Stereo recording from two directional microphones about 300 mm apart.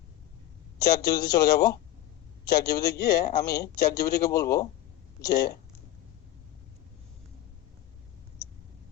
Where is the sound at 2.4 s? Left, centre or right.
Centre.